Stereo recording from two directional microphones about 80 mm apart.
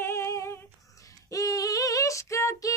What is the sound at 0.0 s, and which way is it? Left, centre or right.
Female singing, left.